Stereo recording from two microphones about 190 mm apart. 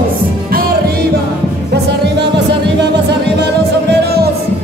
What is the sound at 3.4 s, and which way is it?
Music, 60° right (ahead or behind).